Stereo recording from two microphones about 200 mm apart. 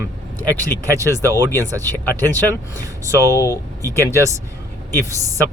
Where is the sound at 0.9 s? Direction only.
15° right (ahead or behind).